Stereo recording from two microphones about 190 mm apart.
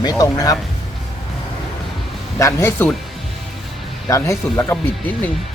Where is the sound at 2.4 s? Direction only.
15° left (ahead or behind).